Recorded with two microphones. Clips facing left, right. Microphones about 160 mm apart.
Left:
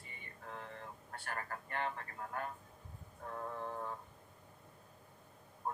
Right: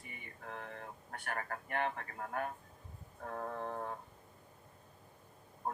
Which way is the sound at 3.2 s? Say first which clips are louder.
Right 2 dB; 55° right (ahead or behind).